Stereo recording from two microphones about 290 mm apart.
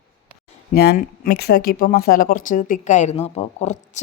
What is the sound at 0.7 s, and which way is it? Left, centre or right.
Speech, left.